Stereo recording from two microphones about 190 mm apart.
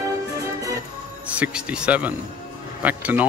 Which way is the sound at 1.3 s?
5° right (ahead or behind).